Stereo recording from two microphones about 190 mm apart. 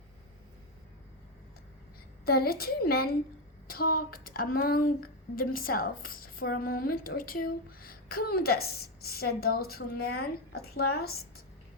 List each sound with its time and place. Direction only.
2.2 s a woman's voice: 55° left (ahead or behind)